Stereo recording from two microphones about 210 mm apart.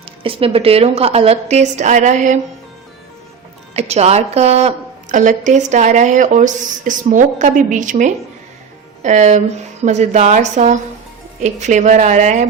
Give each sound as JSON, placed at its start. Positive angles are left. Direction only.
{"t": 0.2, "sound": "a woman's voice", "side_deg": -25}
{"t": 3.8, "sound": "a woman's voice", "side_deg": -30}